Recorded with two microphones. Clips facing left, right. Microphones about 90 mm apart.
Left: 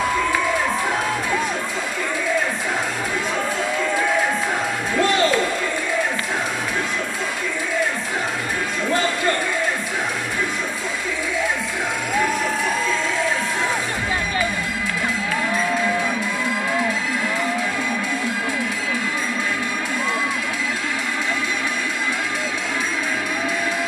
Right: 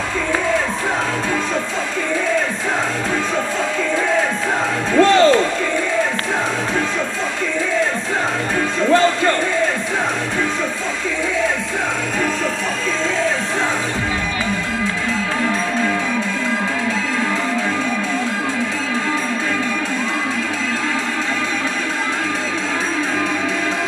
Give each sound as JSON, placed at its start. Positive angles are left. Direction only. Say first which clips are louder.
{"t": 5.0, "sound": "music", "louder": "right 7 dB", "side_deg": -30}